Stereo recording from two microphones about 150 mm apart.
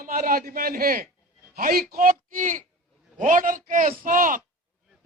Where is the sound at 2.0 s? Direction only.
65° right (ahead or behind).